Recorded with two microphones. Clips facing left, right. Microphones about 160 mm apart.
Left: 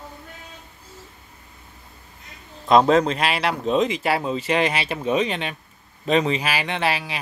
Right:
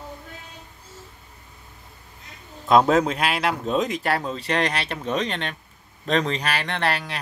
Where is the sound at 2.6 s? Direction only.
5° right (ahead or behind).